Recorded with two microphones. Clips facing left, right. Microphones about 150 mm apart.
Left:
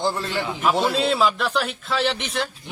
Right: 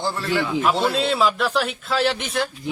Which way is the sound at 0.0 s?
20° left (ahead or behind).